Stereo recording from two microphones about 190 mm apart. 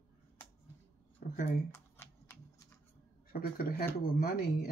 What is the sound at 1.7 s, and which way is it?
Computer keyboard, 15° left (ahead or behind).